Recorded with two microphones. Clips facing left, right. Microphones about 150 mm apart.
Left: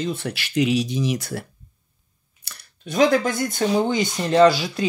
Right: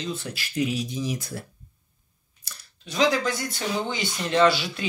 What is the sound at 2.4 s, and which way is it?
Speech, 65° left (ahead or behind).